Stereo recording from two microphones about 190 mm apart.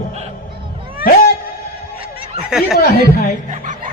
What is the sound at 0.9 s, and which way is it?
Cat, 50° left (ahead or behind).